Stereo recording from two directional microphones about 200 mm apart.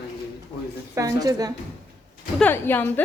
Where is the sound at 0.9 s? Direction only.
15° right (ahead or behind).